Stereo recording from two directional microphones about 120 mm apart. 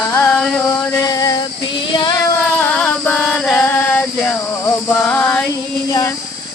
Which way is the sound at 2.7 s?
5° left (ahead or behind).